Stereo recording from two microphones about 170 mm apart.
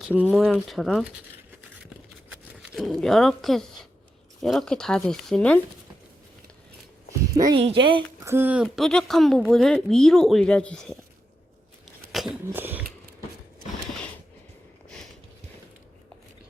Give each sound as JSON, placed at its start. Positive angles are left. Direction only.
{"t": 0.0, "sound": "a woman's voice", "side_deg": -5}
{"t": 2.6, "sound": "a woman's voice", "side_deg": 0}
{"t": 7.3, "sound": "speech", "side_deg": -20}
{"t": 8.2, "sound": "a woman's voice", "side_deg": -15}
{"t": 12.1, "sound": "a sound", "side_deg": 0}